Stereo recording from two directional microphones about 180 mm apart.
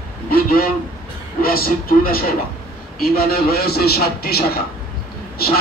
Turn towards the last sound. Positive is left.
turn(degrees=60)  # may be behind; listen again after turning